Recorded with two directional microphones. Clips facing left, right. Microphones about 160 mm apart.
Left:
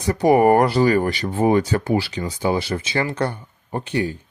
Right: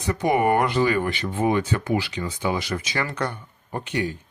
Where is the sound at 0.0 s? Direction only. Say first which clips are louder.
Left 6 dB; 35° left (ahead or behind).